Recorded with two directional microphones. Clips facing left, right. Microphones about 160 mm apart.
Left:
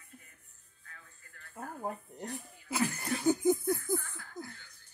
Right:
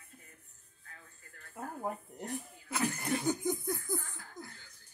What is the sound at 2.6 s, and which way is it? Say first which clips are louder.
Laughter: left 1 dB; 5° left (ahead or behind).